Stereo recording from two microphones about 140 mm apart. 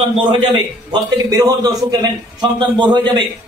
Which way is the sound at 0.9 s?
25° right (ahead or behind).